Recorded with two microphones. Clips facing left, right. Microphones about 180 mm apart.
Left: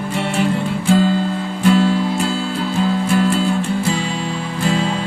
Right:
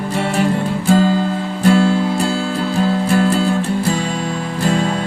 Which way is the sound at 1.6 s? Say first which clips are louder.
Right 1 dB; 45° right (ahead or behind).